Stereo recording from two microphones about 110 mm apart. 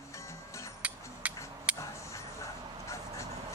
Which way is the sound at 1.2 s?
10° right (ahead or behind).